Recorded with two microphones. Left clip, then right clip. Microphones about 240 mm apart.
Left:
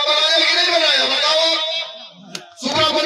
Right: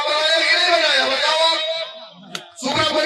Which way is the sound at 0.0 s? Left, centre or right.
Left.